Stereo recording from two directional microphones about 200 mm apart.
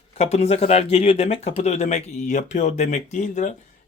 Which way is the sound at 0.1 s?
30° left (ahead or behind).